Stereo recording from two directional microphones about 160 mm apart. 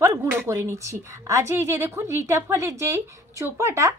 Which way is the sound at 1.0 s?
20° right (ahead or behind).